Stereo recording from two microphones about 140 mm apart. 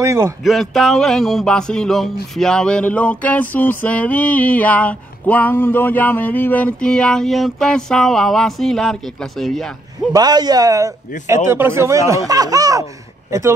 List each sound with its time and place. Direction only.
0.0 s speech: 20° right (ahead or behind)
0.4 s music: centre (ahead or behind)
2.3 s a sound: 5° left (ahead or behind)
10.1 s speech: 30° right (ahead or behind)